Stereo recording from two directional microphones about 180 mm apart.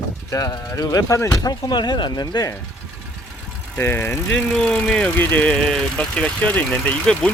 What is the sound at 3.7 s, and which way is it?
Speech, 10° left (ahead or behind).